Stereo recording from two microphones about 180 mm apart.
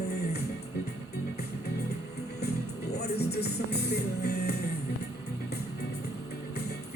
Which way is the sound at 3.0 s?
65° left (ahead or behind).